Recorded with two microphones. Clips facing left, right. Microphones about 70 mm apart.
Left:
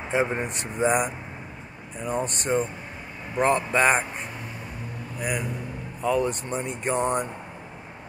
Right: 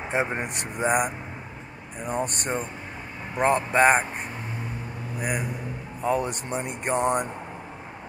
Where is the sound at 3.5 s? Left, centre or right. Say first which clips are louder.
Right 5 dB; right.